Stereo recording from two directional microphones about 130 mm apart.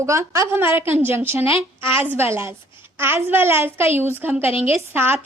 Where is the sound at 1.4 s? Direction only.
45° left (ahead or behind).